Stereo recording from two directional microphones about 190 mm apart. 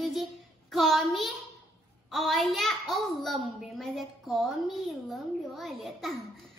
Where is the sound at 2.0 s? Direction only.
Centre (ahead or behind).